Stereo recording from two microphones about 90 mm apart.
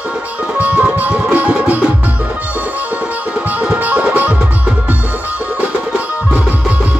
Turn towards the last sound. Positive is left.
turn(degrees=-15)  # may be behind; listen again after turning